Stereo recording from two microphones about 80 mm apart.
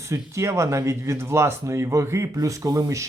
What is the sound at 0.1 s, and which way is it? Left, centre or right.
Speech, right.